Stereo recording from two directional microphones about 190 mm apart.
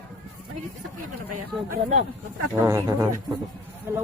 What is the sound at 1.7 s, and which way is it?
Speech, 35° right (ahead or behind).